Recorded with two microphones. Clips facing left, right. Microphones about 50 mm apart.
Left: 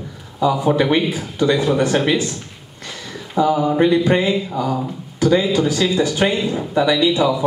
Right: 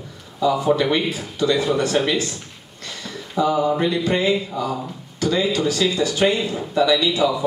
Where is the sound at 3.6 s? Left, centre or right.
Centre.